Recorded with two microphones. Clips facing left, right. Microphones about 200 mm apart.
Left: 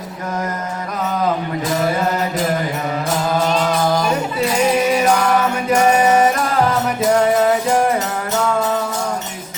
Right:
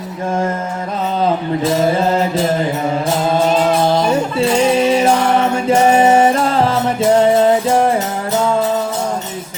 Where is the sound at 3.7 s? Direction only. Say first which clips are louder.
Right 4 dB; 30° right (ahead or behind).